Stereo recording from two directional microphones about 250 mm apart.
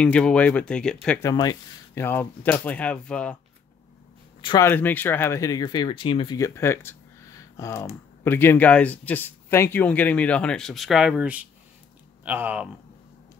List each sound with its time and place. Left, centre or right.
0.0 s speech: centre
4.4 s speech: centre